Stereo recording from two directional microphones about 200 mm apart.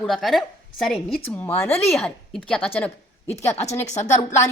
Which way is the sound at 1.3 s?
10° left (ahead or behind).